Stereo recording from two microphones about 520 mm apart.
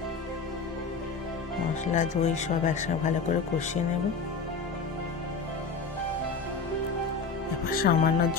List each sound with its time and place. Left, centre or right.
2.0 s speech: centre
7.7 s speech: centre